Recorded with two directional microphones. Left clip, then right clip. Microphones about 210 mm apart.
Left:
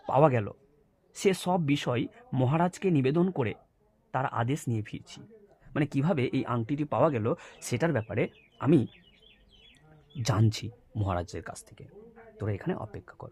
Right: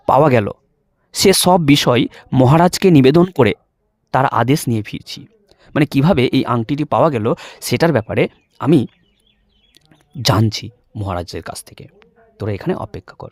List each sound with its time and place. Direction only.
0.0 s speech: 55° right (ahead or behind)
10.2 s speech: 40° right (ahead or behind)